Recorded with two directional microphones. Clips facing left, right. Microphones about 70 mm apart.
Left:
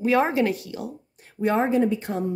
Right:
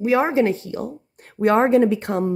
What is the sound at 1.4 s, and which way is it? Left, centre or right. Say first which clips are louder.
Speech: right 6 dB; right.